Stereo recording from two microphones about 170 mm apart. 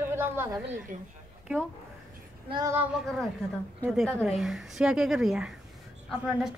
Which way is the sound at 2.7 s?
Centre (ahead or behind).